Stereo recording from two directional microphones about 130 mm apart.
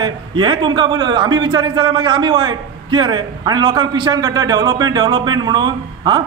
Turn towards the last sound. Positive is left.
turn(degrees=-35)  # may be behind; listen again after turning